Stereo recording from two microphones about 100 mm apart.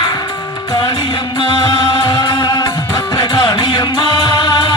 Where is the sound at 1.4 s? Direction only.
55° left (ahead or behind).